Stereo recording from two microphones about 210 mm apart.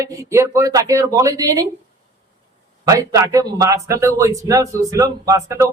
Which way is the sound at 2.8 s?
15° right (ahead or behind).